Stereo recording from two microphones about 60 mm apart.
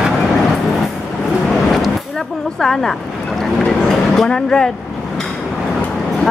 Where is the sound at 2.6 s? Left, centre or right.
Centre.